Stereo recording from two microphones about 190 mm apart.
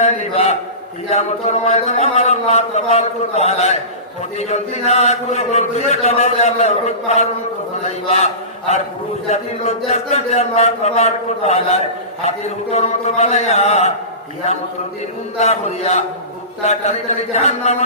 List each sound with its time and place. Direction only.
0.0 s a man's voice: 35° left (ahead or behind)
15.4 s speech: 35° left (ahead or behind)